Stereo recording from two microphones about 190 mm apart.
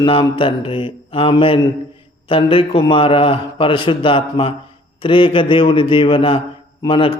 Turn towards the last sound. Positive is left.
turn(degrees=25)  # may be behind; listen again after turning